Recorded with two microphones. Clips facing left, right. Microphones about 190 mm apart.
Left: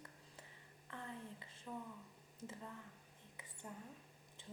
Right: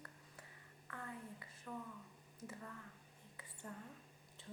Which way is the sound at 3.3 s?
15° left (ahead or behind).